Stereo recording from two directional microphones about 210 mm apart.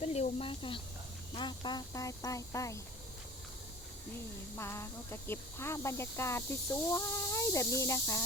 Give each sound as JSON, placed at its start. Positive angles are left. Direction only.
{"t": 0.0, "sound": "speech", "side_deg": 30}
{"t": 4.5, "sound": "speech", "side_deg": 10}